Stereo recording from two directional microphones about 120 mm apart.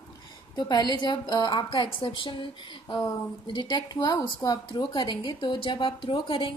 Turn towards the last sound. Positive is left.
turn(degrees=45)  # may be behind; listen again after turning